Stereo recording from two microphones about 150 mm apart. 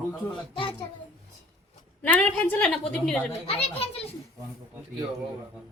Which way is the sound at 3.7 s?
40° left (ahead or behind).